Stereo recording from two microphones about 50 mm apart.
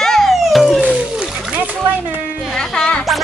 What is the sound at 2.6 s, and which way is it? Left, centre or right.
Speech, centre.